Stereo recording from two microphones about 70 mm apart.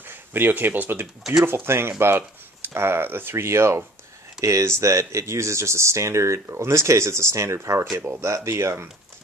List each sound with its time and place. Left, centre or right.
0.0 s speech: right